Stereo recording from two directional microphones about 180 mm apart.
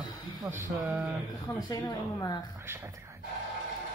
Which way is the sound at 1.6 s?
20° left (ahead or behind).